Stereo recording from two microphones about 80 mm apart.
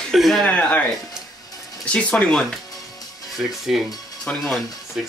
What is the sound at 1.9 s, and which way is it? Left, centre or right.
Speech, centre.